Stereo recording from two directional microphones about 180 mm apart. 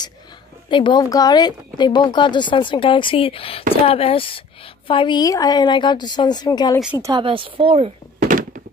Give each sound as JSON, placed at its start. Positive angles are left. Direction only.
{"t": 0.7, "sound": "speech", "side_deg": 25}
{"t": 7.0, "sound": "a woman's voice", "side_deg": -25}
{"t": 8.2, "sound": "thunk", "side_deg": -50}